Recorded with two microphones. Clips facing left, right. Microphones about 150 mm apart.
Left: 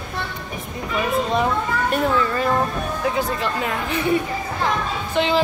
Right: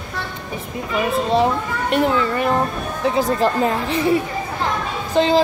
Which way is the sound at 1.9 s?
25° right (ahead or behind).